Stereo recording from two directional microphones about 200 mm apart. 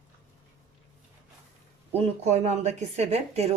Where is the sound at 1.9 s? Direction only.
30° right (ahead or behind).